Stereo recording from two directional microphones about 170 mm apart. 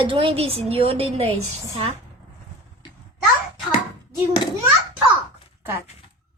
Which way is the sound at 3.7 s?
25° left (ahead or behind).